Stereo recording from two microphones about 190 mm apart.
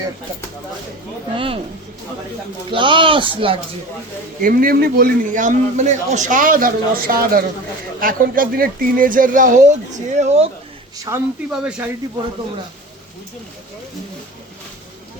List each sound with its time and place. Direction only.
1.4 s speech: 30° right (ahead or behind)
2.6 s speech: 25° right (ahead or behind)
4.4 s a man's voice: 50° right (ahead or behind); by 10.5 s 35° right (ahead or behind)
11.1 s speech: 15° right (ahead or behind)
11.5 s speech: 5° right (ahead or behind)